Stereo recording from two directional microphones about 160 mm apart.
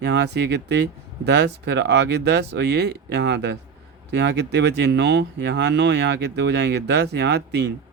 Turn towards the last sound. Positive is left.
turn(degrees=-90)